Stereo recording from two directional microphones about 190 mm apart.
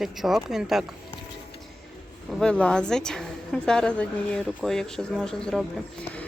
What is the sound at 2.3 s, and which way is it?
Speech, 5° left (ahead or behind).